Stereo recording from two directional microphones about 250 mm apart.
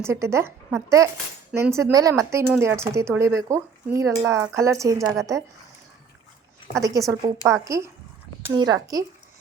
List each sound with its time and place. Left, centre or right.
0.0 s speech: centre
6.7 s speech: centre